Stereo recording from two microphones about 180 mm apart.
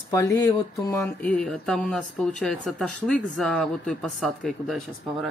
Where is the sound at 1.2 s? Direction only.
5° left (ahead or behind).